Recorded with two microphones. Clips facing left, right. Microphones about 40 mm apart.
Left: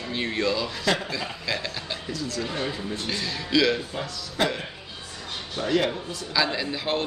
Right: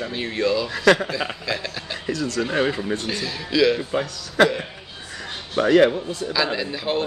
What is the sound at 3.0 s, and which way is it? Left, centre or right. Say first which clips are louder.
Speech: right 2 dB; centre.